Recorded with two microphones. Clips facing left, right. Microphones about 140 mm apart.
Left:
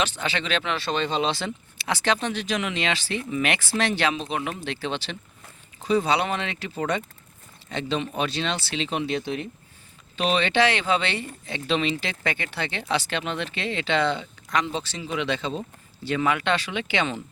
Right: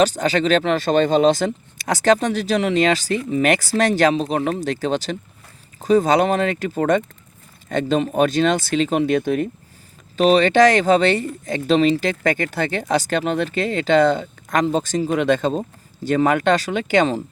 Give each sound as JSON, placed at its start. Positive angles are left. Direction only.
{"t": 0.0, "sound": "speech", "side_deg": -40}